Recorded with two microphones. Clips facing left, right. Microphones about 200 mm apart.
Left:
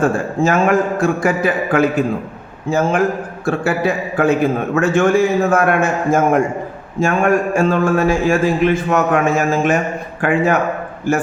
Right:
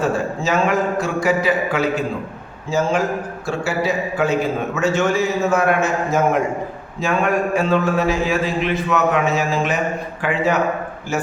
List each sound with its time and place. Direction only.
0.0 s a man's voice: 50° left (ahead or behind)